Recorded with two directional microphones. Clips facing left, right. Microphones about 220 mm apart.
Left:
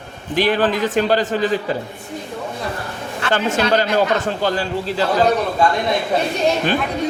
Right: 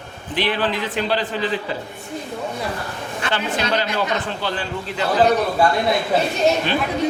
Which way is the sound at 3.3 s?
45° left (ahead or behind).